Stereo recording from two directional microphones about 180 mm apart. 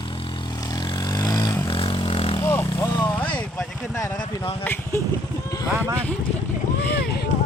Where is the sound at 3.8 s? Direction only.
15° left (ahead or behind).